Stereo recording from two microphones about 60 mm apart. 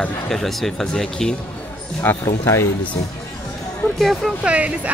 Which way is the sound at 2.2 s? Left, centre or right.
Left.